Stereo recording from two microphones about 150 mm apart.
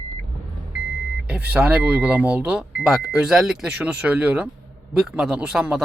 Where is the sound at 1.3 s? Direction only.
10° right (ahead or behind).